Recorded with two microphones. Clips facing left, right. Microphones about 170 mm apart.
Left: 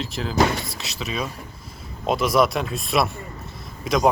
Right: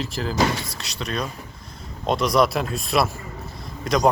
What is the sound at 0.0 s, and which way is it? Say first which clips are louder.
Speech: left 1 dB; centre (ahead or behind).